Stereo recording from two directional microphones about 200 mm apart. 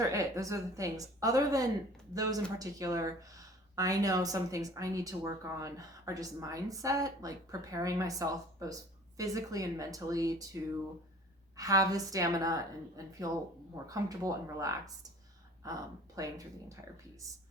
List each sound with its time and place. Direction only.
0.1 s speech: 15° right (ahead or behind)